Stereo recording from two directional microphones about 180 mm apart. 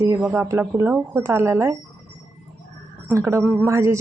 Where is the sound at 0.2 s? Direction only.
10° right (ahead or behind).